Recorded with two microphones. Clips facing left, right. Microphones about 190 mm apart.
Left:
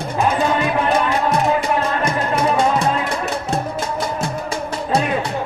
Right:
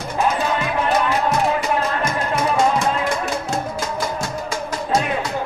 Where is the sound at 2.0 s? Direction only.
30° left (ahead or behind).